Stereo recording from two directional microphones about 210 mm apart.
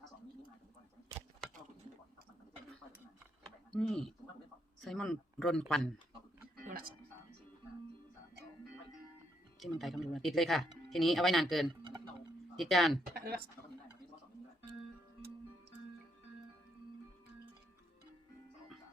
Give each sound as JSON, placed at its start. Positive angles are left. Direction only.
{"t": 3.8, "sound": "speech", "side_deg": 5}
{"t": 9.6, "sound": "speech", "side_deg": 0}
{"t": 11.8, "sound": "a sound", "side_deg": -20}
{"t": 12.5, "sound": "speech", "side_deg": 0}
{"t": 13.1, "sound": "speech", "side_deg": -50}